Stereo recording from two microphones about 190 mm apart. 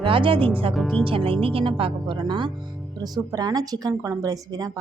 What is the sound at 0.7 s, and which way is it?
Speech, centre (ahead or behind).